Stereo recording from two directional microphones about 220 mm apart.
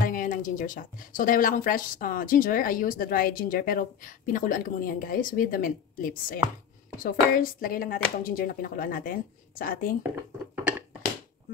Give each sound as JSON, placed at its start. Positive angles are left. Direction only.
{"t": 0.0, "sound": "speech", "side_deg": 40}